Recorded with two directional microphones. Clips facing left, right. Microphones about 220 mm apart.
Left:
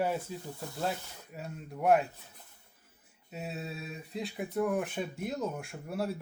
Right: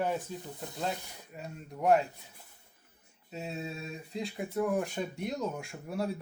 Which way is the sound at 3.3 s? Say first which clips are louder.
Right 1 dB; centre (ahead or behind).